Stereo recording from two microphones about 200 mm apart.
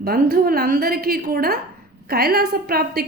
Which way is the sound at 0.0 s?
50° right (ahead or behind).